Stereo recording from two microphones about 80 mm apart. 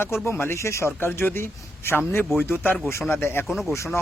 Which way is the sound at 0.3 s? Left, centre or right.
Left.